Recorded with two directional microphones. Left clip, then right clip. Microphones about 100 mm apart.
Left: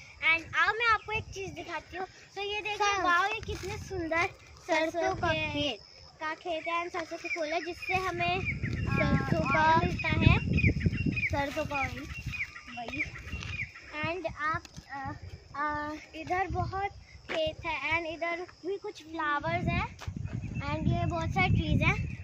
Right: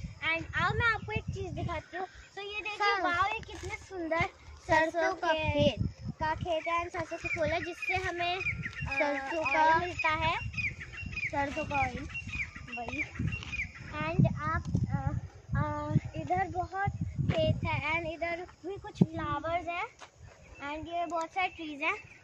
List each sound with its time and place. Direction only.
0.5 s a sound: 15° right (ahead or behind)
2.3 s a child's voice: 15° right (ahead or behind)
6.2 s speech: 25° right (ahead or behind)
8.6 s a sound: 20° right (ahead or behind)
11.6 s speech: 55° left (ahead or behind)
13.9 s livestock: centre (ahead or behind)
16.3 s a child's voice: 5° right (ahead or behind)
18.3 s speech: 20° right (ahead or behind)
19.2 s speech: 5° left (ahead or behind)